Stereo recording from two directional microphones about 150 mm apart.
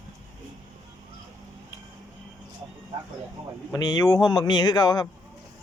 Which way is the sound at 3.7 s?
25° left (ahead or behind).